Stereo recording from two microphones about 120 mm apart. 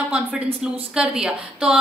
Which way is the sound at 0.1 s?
10° right (ahead or behind).